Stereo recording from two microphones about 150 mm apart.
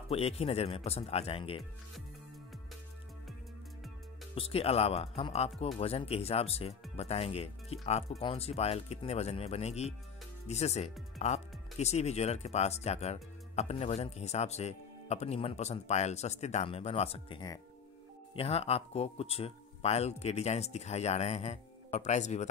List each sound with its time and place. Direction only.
0.1 s speech: 40° left (ahead or behind)
4.4 s speech: 40° left (ahead or behind)